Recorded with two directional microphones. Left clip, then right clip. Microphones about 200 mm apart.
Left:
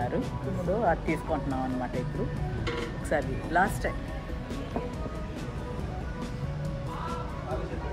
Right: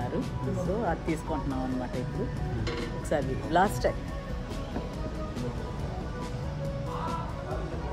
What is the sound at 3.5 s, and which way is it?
Speech, 30° right (ahead or behind).